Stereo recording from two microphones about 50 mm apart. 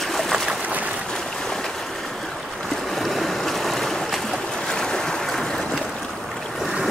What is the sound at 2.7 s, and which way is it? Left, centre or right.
Boat, centre.